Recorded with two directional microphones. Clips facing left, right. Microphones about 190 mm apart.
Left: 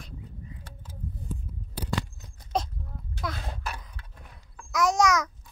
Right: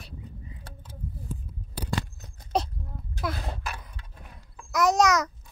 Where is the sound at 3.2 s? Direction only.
5° right (ahead or behind).